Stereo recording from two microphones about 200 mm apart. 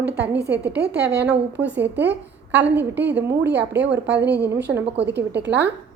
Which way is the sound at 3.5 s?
55° right (ahead or behind).